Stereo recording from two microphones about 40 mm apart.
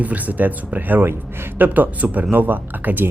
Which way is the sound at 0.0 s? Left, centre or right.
Right.